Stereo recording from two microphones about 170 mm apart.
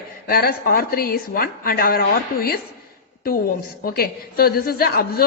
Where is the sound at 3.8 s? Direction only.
60° left (ahead or behind).